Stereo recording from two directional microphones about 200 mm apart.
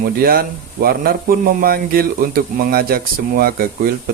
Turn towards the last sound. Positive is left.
turn(degrees=-45)  # may be behind; listen again after turning